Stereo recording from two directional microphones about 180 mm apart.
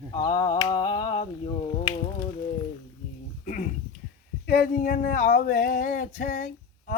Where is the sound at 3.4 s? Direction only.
45° left (ahead or behind).